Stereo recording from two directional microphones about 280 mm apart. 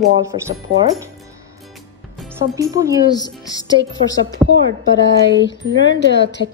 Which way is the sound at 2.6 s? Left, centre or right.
Centre.